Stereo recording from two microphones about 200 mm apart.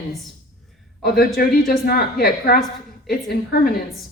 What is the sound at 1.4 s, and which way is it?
A woman's voice, 50° left (ahead or behind).